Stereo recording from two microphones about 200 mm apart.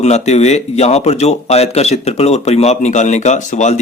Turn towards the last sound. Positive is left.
turn(degrees=35)  # may be behind; listen again after turning